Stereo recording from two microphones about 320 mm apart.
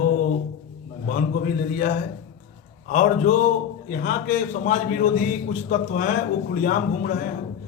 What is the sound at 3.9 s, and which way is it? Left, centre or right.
A man's voice, left.